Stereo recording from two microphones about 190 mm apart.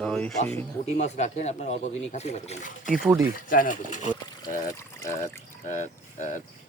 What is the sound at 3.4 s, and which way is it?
Speech, 45° left (ahead or behind).